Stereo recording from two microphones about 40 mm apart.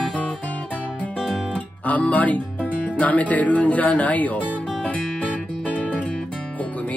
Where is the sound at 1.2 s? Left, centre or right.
Centre.